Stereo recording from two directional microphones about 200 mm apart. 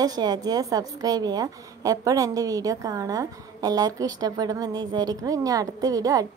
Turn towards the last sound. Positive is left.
turn(degrees=-20)  # may be behind; listen again after turning